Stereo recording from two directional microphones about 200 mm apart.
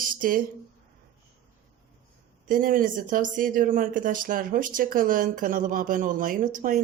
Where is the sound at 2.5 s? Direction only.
45° right (ahead or behind).